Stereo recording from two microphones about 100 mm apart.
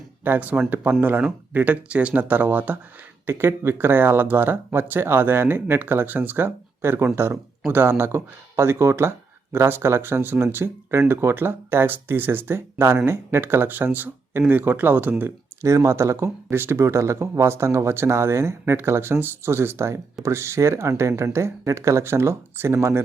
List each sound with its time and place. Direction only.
0.3 s speech: 20° right (ahead or behind)